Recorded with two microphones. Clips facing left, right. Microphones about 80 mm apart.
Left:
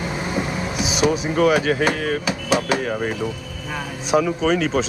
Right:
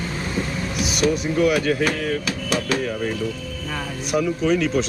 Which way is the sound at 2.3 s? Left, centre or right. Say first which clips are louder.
Left 3 dB; centre.